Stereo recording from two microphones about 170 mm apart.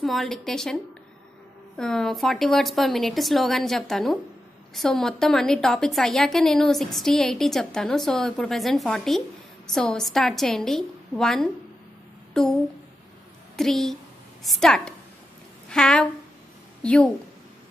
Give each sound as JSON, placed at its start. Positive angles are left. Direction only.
{"t": 0.0, "sound": "a woman's voice", "side_deg": 0}
{"t": 1.8, "sound": "a woman's voice", "side_deg": 5}
{"t": 13.6, "sound": "a woman's voice", "side_deg": 0}